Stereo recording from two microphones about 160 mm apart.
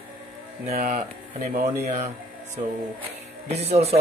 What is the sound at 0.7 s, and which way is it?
Speech, 55° right (ahead or behind).